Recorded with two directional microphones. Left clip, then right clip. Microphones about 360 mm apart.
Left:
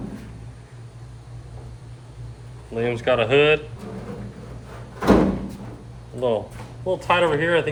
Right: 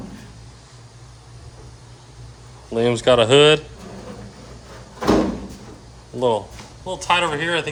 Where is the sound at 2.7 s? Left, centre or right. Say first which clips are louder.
Right 5 dB; right.